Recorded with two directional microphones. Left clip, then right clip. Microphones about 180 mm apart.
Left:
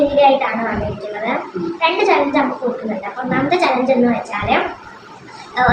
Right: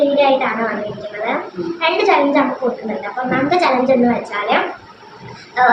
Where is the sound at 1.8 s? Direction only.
20° right (ahead or behind).